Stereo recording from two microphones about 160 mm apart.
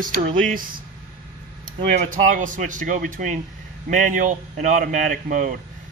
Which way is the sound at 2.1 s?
55° right (ahead or behind).